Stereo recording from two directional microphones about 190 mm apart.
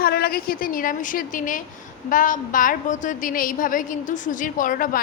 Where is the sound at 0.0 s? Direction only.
55° left (ahead or behind).